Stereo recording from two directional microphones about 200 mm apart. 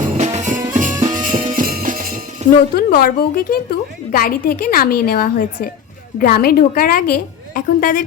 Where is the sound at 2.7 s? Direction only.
45° left (ahead or behind).